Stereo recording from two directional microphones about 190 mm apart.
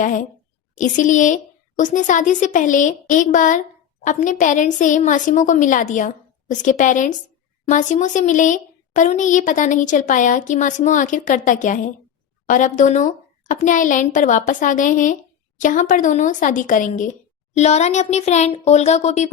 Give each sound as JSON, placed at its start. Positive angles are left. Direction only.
{"t": 0.0, "sound": "a woman's voice", "side_deg": 45}